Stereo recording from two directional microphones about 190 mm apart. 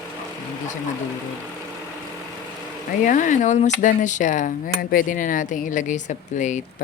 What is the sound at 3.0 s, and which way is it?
Speech, 40° left (ahead or behind).